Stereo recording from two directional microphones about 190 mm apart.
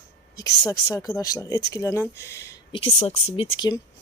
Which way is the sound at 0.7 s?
20° left (ahead or behind).